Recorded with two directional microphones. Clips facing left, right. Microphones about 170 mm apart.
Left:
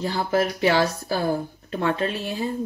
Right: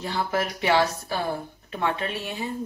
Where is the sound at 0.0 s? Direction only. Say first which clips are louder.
Left 4 dB; 35° left (ahead or behind).